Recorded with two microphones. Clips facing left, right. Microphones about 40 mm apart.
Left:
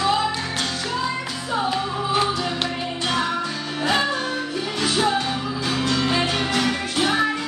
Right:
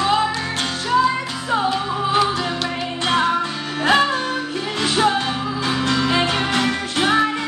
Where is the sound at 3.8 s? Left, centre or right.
Right.